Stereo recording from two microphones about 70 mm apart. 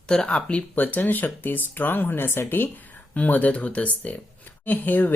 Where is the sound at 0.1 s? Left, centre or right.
Centre.